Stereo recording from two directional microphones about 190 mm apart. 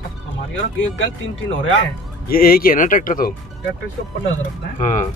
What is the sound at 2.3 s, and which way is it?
Speech, 50° left (ahead or behind).